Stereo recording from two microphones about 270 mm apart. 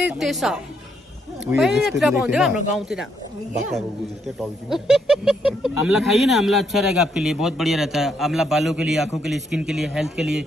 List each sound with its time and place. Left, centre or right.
0.0 s speech: centre
4.4 s speech: centre